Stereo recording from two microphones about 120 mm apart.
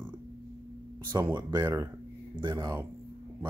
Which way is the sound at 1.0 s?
35° right (ahead or behind).